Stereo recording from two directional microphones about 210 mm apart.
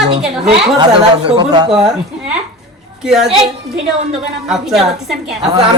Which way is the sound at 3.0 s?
5° right (ahead or behind).